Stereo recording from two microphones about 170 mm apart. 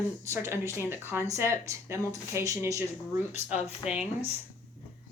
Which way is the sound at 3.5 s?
40° left (ahead or behind).